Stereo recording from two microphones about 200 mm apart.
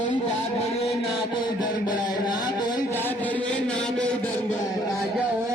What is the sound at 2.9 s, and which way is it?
Chant, 10° left (ahead or behind).